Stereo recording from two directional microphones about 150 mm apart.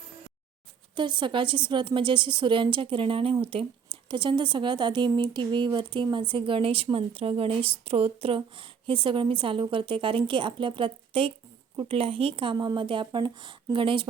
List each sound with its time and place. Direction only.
0.9 s speech: 30° right (ahead or behind)